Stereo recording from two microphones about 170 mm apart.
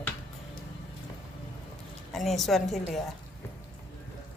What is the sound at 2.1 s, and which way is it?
Speech, centre (ahead or behind).